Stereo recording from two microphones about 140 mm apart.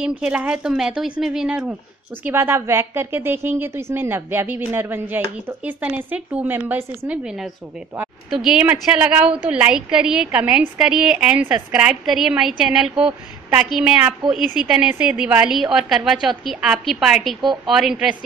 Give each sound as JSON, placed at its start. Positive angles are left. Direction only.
{"t": 0.0, "sound": "a woman's voice", "side_deg": -10}
{"t": 7.2, "sound": "a woman's voice", "side_deg": -5}